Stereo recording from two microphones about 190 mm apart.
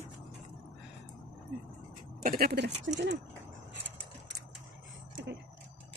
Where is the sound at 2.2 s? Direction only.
50° right (ahead or behind); by 2.9 s 65° right (ahead or behind).